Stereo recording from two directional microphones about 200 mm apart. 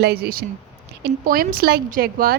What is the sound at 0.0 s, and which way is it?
A woman's voice, 50° right (ahead or behind).